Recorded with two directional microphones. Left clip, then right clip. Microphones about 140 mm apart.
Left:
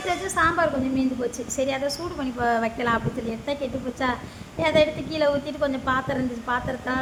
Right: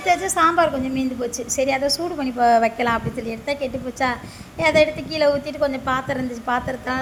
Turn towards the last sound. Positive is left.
turn(degrees=-20)  # may be behind; listen again after turning